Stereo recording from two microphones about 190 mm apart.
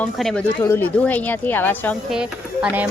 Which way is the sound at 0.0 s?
5° left (ahead or behind).